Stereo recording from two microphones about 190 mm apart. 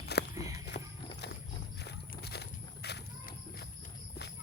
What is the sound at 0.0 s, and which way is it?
Walk, 60° left (ahead or behind).